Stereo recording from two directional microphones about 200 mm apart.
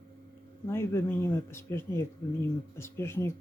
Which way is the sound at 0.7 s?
15° left (ahead or behind).